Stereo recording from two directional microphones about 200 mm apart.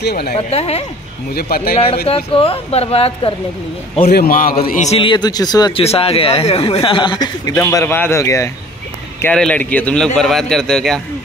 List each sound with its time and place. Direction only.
0.0 s a man's voice: 55° left (ahead or behind)
0.5 s speech: 30° left (ahead or behind)
1.3 s a man's voice: 50° left (ahead or behind)
2.0 s speech: 30° left (ahead or behind)
4.1 s a man's voice: 45° left (ahead or behind)
4.9 s a man's voice: 25° left (ahead or behind); by 11.0 s centre (ahead or behind)